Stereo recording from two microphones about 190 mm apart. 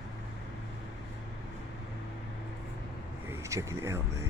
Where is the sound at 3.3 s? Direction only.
15° right (ahead or behind).